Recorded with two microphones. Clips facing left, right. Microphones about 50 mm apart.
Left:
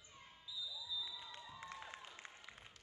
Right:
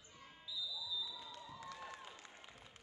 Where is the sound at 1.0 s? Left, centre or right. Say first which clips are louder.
Right 1 dB; left.